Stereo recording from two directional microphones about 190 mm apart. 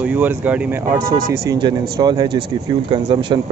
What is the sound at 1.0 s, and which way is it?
Speech, 50° right (ahead or behind).